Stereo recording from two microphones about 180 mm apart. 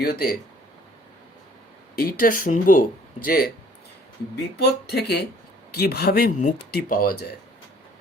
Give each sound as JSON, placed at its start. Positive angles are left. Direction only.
{"t": 0.0, "sound": "speech", "side_deg": 55}
{"t": 2.0, "sound": "speech", "side_deg": 55}
{"t": 4.6, "sound": "speech", "side_deg": 65}